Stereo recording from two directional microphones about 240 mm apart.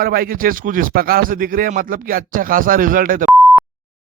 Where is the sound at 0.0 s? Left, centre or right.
Right.